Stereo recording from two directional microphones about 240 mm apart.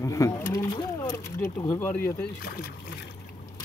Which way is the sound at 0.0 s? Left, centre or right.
Centre.